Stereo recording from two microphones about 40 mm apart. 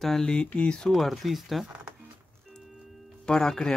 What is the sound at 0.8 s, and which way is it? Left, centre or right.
Speech, centre.